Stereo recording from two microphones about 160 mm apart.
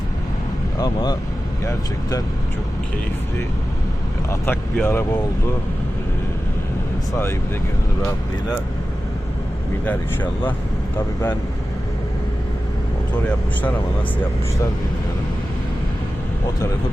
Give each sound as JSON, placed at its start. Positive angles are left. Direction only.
{"t": 1.6, "sound": "speech", "side_deg": 20}
{"t": 4.3, "sound": "speech", "side_deg": 15}
{"t": 9.8, "sound": "speech", "side_deg": 10}